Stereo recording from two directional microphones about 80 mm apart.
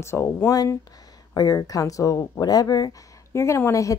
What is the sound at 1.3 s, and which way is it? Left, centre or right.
A woman's voice, left.